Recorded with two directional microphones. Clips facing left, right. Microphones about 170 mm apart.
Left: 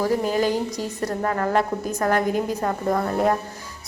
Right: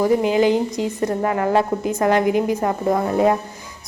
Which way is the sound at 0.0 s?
15° right (ahead or behind).